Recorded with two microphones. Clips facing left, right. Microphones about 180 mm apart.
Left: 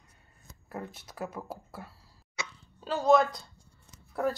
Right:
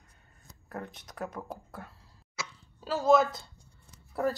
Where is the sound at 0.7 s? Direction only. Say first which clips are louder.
Left 1 dB; 5° left (ahead or behind).